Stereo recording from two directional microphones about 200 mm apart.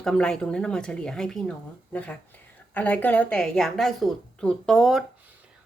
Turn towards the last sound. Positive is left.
turn(degrees=0)  # may be behind; listen again after turning